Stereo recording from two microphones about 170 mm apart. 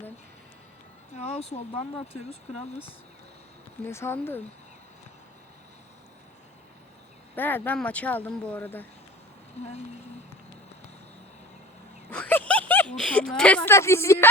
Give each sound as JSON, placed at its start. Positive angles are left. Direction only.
{"t": 1.1, "sound": "speech", "side_deg": 35}
{"t": 3.8, "sound": "speech", "side_deg": 15}
{"t": 7.3, "sound": "speech", "side_deg": 10}
{"t": 9.6, "sound": "speech", "side_deg": 40}
{"t": 12.1, "sound": "speech", "side_deg": 10}